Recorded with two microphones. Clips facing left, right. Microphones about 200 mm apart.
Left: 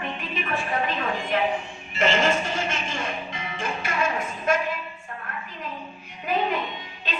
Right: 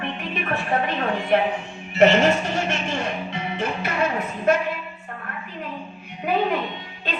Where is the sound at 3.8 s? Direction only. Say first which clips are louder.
Even; 65° right (ahead or behind).